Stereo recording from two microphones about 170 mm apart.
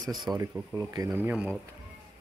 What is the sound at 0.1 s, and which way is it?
Speech, centre (ahead or behind).